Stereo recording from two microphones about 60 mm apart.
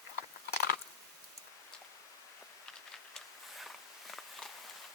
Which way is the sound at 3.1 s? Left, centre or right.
Centre.